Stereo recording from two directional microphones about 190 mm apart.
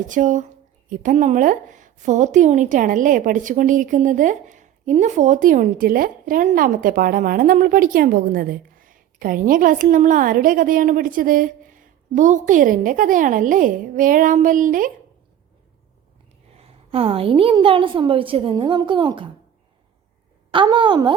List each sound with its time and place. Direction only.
0.1 s a woman's voice: 40° right (ahead or behind)
16.6 s a woman's voice: 30° right (ahead or behind)
20.5 s a woman's voice: 25° right (ahead or behind)